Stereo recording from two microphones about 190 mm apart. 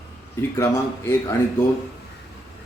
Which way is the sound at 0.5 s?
15° left (ahead or behind).